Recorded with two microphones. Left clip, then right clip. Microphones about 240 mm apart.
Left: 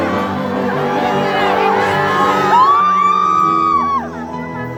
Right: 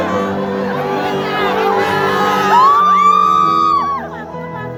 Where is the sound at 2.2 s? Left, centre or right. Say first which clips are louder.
Right 1 dB; right.